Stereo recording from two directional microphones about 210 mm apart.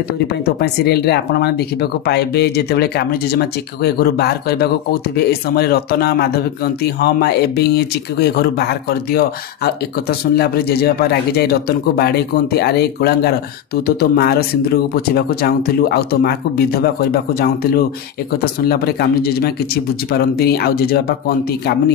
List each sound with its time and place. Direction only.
0.3 s speech: 50° left (ahead or behind)